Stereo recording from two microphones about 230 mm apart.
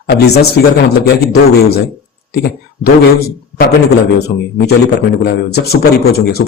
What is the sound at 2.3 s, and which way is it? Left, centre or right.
Speech, left.